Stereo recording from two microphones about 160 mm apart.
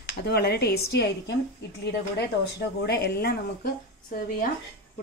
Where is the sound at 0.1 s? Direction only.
85° left.